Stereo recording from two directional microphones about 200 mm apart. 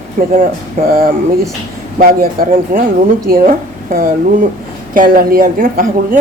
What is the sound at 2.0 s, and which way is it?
A woman's voice, 45° right (ahead or behind).